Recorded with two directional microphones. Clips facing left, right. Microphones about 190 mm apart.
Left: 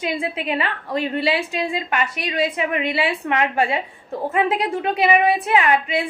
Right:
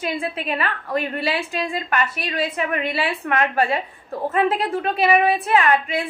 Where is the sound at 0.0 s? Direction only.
15° left (ahead or behind).